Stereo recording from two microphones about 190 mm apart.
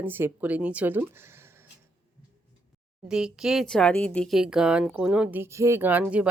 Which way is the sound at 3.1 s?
5° right (ahead or behind).